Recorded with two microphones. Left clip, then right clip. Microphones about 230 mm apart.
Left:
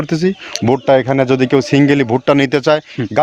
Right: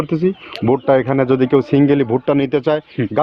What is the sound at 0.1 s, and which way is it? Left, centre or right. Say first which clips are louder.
Speech: left 2 dB; left.